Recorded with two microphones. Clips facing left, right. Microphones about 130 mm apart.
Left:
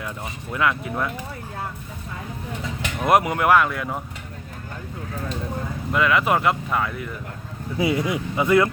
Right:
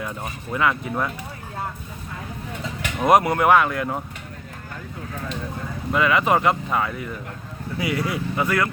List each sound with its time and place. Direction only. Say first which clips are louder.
0.5 s speech: right 1 dB; centre (ahead or behind)
3.0 s speech: right 2 dB; centre (ahead or behind)
5.9 s speech: right 1 dB; centre (ahead or behind)
7.8 s speech: left 3 dB; 25° left (ahead or behind)